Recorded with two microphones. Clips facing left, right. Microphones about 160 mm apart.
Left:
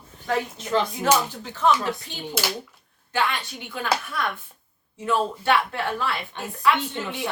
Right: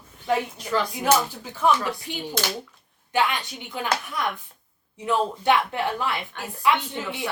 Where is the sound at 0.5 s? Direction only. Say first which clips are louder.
Left 2 dB; 25° left (ahead or behind).